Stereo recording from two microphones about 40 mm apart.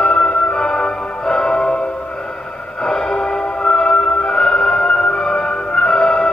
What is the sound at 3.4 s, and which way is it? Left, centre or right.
Music, left.